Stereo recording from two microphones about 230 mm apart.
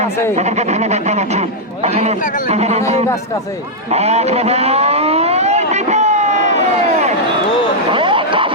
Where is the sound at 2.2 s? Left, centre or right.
Left.